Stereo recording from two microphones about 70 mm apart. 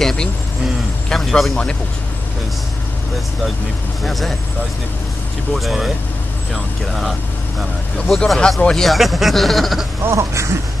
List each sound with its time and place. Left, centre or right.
0.0 s vehicle: centre
1.0 s a sound: centre
4.0 s speech: centre
5.5 s speech: centre
8.8 s speech: centre
10.0 s a sound: right